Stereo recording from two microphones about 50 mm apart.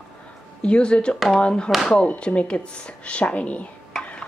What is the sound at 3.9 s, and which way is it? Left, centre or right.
Stir, centre.